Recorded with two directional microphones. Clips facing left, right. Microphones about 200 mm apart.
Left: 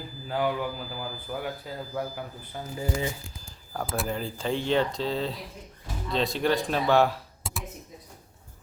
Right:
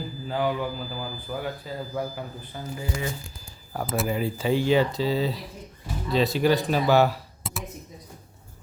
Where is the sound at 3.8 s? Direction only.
Centre (ahead or behind).